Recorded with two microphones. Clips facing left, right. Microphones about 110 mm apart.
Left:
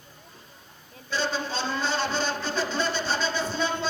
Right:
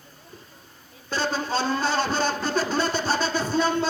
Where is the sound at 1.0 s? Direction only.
45° right (ahead or behind).